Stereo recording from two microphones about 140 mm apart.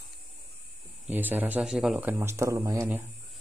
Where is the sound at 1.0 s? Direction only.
15° right (ahead or behind).